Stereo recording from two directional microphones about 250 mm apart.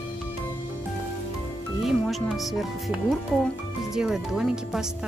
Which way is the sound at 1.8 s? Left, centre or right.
Centre.